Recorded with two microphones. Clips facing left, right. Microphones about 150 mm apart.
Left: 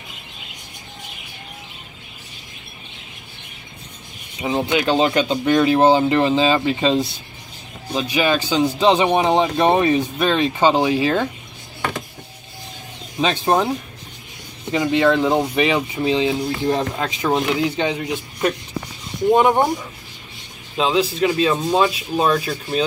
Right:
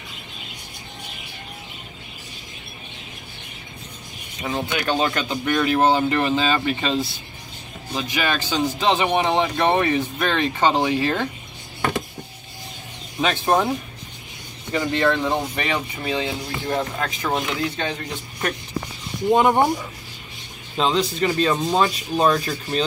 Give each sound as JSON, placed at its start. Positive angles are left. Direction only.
{"t": 4.4, "sound": "speech", "side_deg": 20}
{"t": 8.8, "sound": "speech", "side_deg": 20}
{"t": 13.2, "sound": "speech", "side_deg": 20}
{"t": 14.7, "sound": "speech", "side_deg": 15}
{"t": 19.3, "sound": "speech", "side_deg": 0}
{"t": 20.7, "sound": "speech", "side_deg": 5}